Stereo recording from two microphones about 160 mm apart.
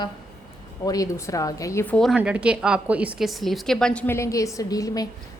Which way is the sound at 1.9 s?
Centre (ahead or behind).